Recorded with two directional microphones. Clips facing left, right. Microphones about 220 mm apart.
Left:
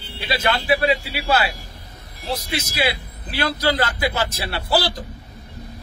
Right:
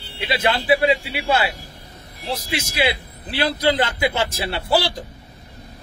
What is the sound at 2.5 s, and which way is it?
A man's voice, 25° right (ahead or behind).